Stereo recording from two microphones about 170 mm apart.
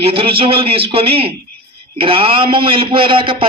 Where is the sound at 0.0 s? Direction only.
35° right (ahead or behind).